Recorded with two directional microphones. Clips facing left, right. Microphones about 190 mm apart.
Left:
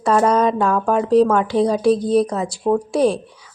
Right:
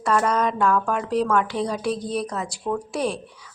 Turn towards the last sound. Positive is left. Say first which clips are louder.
# left 9 dB
turn(degrees=35)  # may be behind; listen again after turning